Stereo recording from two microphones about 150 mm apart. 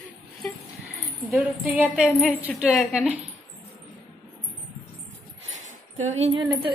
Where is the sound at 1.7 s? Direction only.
10° right (ahead or behind).